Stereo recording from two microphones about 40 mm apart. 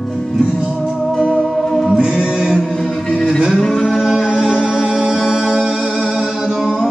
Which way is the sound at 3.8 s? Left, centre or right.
Centre.